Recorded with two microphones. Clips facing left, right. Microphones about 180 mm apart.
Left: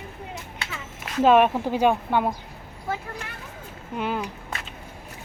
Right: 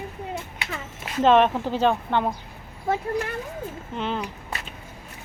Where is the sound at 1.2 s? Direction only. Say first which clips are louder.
Even; 10° left (ahead or behind).